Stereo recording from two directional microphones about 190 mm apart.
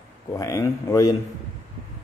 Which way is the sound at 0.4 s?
15° left (ahead or behind).